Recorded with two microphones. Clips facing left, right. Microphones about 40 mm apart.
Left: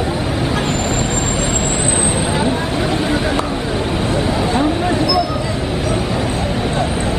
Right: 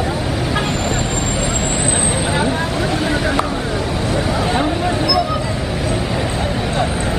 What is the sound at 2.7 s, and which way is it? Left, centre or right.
Vehicle, left.